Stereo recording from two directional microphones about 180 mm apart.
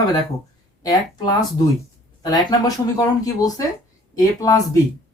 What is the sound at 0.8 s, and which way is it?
Speech, 20° left (ahead or behind).